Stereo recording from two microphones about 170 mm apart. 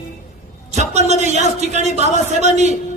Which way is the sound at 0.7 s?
40° right (ahead or behind).